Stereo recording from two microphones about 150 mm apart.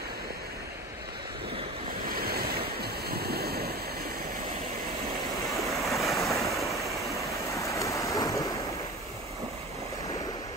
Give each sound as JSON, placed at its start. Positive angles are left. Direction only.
{"t": 2.0, "sound": "waves", "side_deg": -85}
{"t": 5.6, "sound": "waves", "side_deg": 0}
{"t": 6.8, "sound": "waterfall", "side_deg": -20}
{"t": 7.5, "sound": "a sound", "side_deg": 20}